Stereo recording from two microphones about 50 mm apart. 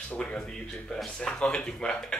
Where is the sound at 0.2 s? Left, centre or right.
Centre.